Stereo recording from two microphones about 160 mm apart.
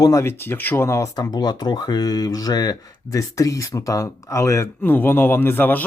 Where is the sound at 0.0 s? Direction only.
20° left (ahead or behind).